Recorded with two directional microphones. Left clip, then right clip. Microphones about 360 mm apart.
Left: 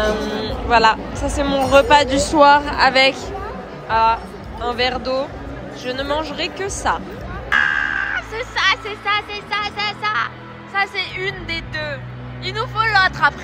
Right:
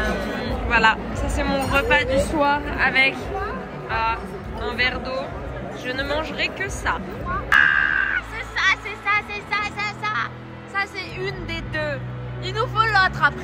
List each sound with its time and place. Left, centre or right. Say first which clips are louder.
0.4 s speech: left 4 dB; centre